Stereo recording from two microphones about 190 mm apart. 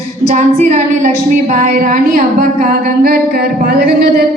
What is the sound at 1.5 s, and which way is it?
Humming, 45° right (ahead or behind).